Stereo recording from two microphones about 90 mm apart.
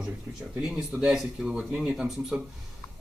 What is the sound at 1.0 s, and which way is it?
Speech, 10° right (ahead or behind).